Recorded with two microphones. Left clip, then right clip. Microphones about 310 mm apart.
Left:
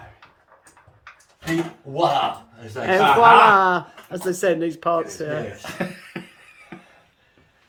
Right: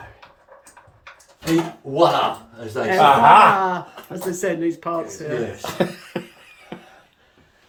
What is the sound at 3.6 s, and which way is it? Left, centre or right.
Speech, centre.